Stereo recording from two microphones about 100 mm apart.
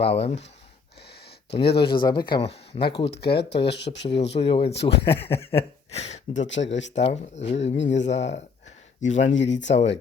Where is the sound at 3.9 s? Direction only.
85° left.